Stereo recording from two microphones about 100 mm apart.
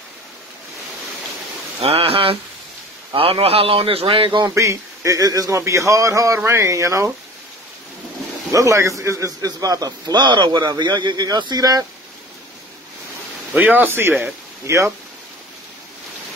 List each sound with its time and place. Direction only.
1.8 s a man's voice: 80° right; by 4.5 s 55° right (ahead or behind)
4.6 s a man's voice: 30° right (ahead or behind)
8.5 s a man's voice: 30° right (ahead or behind)
13.5 s speech: 15° right (ahead or behind)